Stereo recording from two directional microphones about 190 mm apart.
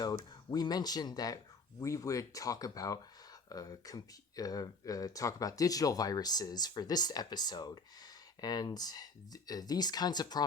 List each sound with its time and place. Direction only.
0.5 s speech: 20° left (ahead or behind)